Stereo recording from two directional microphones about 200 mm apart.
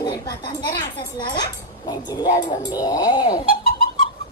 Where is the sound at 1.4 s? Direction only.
20° left (ahead or behind).